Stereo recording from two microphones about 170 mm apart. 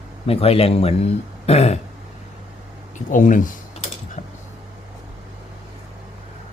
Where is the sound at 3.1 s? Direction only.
50° left (ahead or behind).